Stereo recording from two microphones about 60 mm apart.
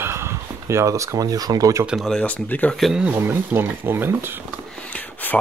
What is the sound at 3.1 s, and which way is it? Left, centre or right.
Speech, right.